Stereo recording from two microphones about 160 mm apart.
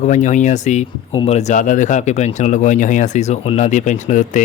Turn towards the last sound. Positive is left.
turn(degrees=55)  # may be behind; listen again after turning